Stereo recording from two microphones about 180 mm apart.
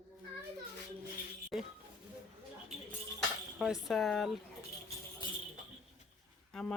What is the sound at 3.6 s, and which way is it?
Speech, centre (ahead or behind).